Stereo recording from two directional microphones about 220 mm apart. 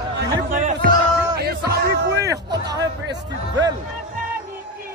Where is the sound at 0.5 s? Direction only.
35° right (ahead or behind).